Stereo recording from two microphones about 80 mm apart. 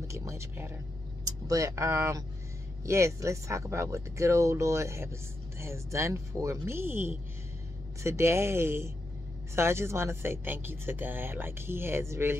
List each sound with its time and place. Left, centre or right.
0.1 s speech: right
1.2 s speech: right